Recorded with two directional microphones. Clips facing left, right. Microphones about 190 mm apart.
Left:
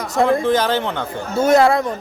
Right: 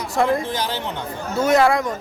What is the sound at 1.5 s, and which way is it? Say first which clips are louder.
Speech: left 2 dB; 30° left (ahead or behind).